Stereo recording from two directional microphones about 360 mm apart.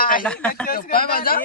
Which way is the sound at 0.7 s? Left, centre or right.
Left.